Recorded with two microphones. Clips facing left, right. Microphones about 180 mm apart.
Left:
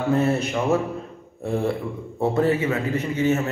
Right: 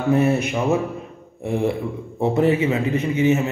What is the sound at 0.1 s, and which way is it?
A man's voice, 15° right (ahead or behind).